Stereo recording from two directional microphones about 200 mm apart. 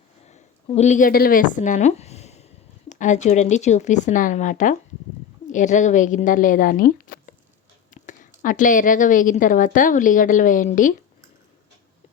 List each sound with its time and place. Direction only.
0.3 s a woman's voice: 35° left (ahead or behind)
7.9 s a sound: 40° left (ahead or behind)
8.4 s a woman's voice: 40° left (ahead or behind)